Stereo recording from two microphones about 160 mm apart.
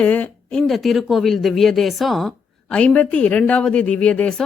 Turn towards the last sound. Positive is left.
turn(degrees=5)  # may be behind; listen again after turning